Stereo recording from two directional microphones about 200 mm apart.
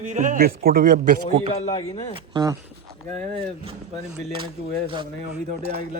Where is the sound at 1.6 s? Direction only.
30° left (ahead or behind).